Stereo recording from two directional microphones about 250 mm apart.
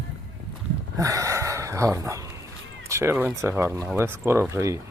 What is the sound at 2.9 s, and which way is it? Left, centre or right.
Speech, centre.